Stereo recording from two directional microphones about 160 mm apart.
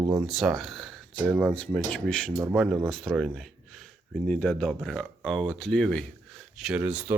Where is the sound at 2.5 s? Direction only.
5° right (ahead or behind).